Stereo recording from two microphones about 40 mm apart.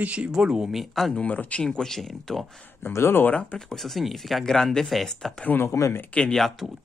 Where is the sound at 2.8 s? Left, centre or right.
Left.